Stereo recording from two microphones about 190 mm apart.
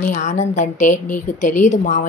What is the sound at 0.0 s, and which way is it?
Speech, 40° left (ahead or behind).